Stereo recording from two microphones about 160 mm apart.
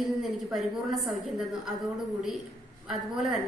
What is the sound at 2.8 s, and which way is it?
Speech, centre (ahead or behind).